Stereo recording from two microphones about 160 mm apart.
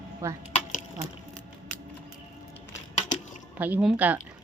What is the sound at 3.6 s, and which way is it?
Speech, 10° right (ahead or behind).